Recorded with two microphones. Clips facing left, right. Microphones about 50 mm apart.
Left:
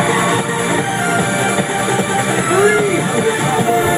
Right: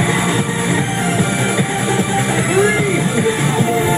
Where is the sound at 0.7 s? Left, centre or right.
Left.